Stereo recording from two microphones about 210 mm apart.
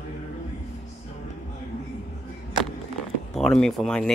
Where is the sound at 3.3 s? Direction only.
Centre (ahead or behind).